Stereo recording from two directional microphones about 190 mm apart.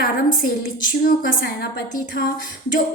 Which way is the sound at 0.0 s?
50° left (ahead or behind).